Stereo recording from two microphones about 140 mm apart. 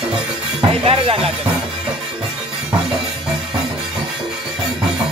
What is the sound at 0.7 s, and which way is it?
Music, 45° right (ahead or behind).